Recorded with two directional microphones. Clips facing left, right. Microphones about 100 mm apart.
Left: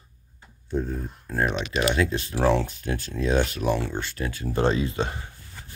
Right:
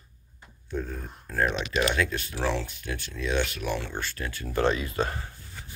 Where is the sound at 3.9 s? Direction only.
20° left (ahead or behind).